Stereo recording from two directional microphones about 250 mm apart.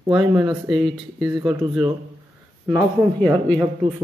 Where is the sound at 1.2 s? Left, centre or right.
Centre.